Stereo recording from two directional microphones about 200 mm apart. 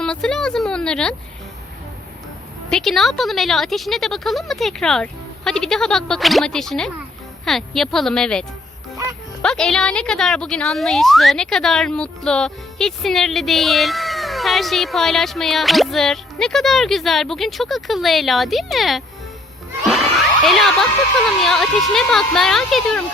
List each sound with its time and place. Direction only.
0.0 s speech: 5° left (ahead or behind)
2.6 s speech: centre (ahead or behind)
19.9 s children shouting: centre (ahead or behind)
21.2 s speech: centre (ahead or behind)